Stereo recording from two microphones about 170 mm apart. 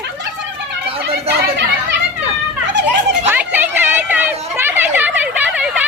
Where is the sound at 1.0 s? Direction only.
75° right (ahead or behind).